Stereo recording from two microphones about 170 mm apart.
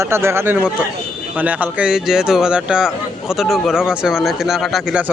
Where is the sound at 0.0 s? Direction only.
15° right (ahead or behind).